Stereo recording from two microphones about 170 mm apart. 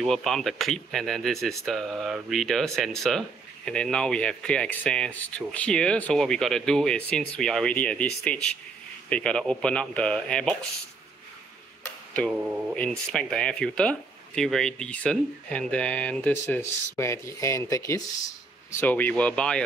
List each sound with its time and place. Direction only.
0.0 s speech: centre (ahead or behind)
11.8 s tick-tock: 10° left (ahead or behind)
12.7 s speech: 5° left (ahead or behind)